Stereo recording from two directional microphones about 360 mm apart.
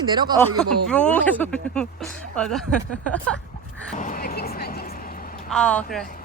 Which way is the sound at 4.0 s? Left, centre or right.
Left.